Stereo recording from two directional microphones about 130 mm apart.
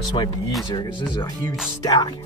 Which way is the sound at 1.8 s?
35° left (ahead or behind).